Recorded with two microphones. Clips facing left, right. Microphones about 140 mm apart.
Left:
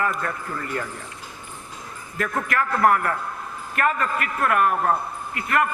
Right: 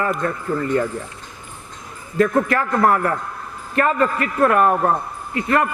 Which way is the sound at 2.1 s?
30° right (ahead or behind).